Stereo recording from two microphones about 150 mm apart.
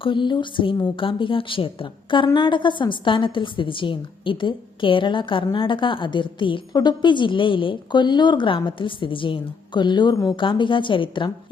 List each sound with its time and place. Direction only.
0.0 s speech: 35° left (ahead or behind)